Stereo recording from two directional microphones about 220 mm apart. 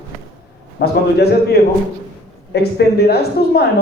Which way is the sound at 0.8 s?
45° left (ahead or behind).